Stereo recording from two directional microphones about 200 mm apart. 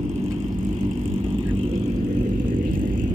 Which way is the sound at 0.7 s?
25° right (ahead or behind).